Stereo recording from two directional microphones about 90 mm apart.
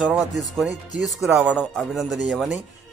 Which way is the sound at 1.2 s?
15° right (ahead or behind).